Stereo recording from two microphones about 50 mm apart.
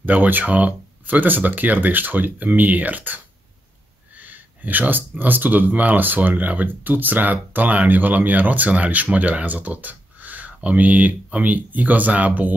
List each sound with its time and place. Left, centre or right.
0.0 s speech: right
4.2 s speech: right
11.5 s speech: right